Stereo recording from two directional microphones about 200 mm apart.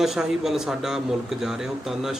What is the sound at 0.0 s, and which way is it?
Speech, centre (ahead or behind).